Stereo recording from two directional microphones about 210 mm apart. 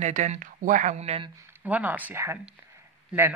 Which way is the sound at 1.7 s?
10° right (ahead or behind).